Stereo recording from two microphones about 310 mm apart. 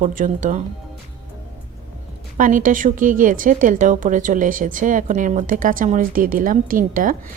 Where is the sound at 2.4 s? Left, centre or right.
Right.